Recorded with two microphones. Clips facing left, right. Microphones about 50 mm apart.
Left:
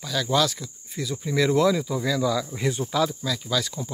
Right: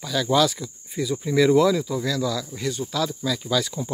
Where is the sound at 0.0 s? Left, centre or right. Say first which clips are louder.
Right 3 dB; centre.